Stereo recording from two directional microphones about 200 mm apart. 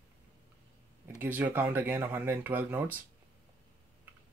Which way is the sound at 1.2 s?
10° right (ahead or behind).